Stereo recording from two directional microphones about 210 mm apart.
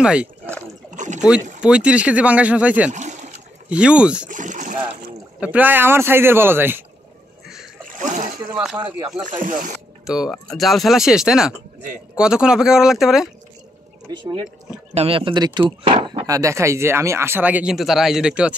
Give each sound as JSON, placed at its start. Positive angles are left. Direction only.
{"t": 0.0, "sound": "speech", "side_deg": -5}
{"t": 0.9, "sound": "rowboat", "side_deg": -35}
{"t": 1.6, "sound": "speech", "side_deg": -5}
{"t": 2.9, "sound": "a sound", "side_deg": -35}
{"t": 3.6, "sound": "speech", "side_deg": -5}
{"t": 4.3, "sound": "speech", "side_deg": -35}
{"t": 5.4, "sound": "speech", "side_deg": -5}
{"t": 8.5, "sound": "speech", "side_deg": -5}
{"t": 9.2, "sound": "speech", "side_deg": -40}
{"t": 10.0, "sound": "speech", "side_deg": -5}
{"t": 14.1, "sound": "speech", "side_deg": -20}